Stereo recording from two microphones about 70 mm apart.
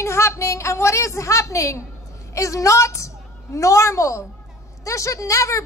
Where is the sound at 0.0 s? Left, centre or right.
Left.